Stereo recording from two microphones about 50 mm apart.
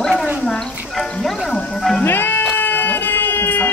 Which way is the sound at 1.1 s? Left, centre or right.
Centre.